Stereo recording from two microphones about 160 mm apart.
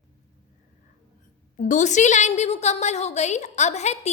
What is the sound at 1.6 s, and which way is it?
A woman's voice, 50° left (ahead or behind).